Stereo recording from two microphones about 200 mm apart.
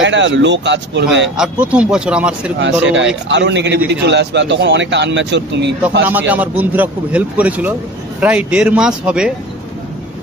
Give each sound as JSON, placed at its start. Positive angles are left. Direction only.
{"t": 0.0, "sound": "speech", "side_deg": -65}
{"t": 1.3, "sound": "speech", "side_deg": -5}
{"t": 2.8, "sound": "speech", "side_deg": -65}
{"t": 6.0, "sound": "a man's voice", "side_deg": -10}